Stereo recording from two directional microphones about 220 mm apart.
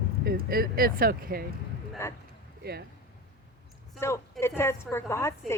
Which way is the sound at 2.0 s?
10° left (ahead or behind).